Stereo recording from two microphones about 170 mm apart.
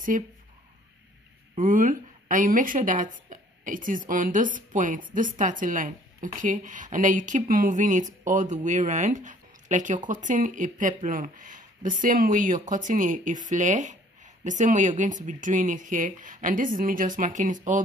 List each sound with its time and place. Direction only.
0.1 s a woman's voice: 50° right (ahead or behind)
1.6 s a woman's voice: 50° right (ahead or behind)